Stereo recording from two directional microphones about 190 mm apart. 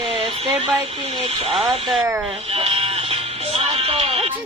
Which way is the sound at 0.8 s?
25° right (ahead or behind).